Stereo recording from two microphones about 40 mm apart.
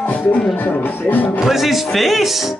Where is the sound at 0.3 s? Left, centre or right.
Left.